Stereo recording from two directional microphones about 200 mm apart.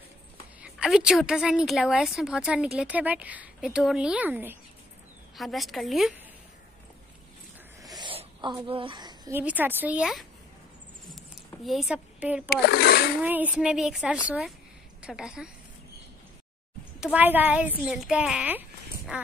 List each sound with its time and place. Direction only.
0.6 s a woman's voice: 5° right (ahead or behind)
8.0 s a sound: 25° right (ahead or behind)
8.6 s speech: 25° right (ahead or behind)
9.4 s speech: 10° right (ahead or behind)
11.6 s speech: centre (ahead or behind)
12.4 s speech: 50° left (ahead or behind)
13.2 s a woman's voice: 10° right (ahead or behind)
17.0 s speech: 10° right (ahead or behind)